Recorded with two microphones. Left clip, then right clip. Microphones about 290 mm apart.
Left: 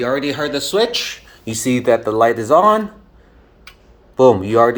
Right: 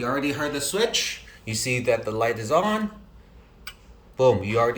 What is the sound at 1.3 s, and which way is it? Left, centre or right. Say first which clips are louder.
Speech: left 6 dB; left.